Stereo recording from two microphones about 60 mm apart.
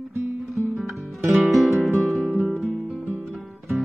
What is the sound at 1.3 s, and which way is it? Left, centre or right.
Music, centre.